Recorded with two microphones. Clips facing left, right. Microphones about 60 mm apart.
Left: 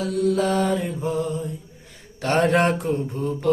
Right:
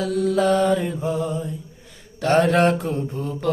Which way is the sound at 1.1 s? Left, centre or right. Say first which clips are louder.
Left 1 dB; right.